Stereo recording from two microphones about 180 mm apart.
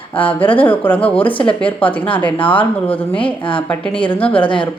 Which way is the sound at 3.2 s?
30° left (ahead or behind).